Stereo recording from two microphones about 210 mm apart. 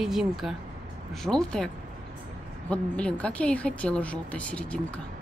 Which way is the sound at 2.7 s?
5° left (ahead or behind).